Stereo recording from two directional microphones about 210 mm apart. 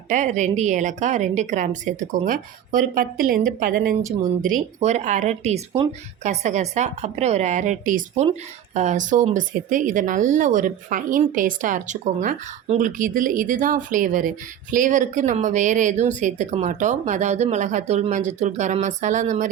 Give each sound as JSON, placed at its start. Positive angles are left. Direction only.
{"t": 0.1, "sound": "speech", "side_deg": -35}